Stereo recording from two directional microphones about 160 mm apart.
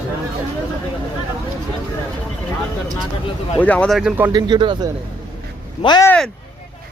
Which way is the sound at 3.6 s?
10° left (ahead or behind).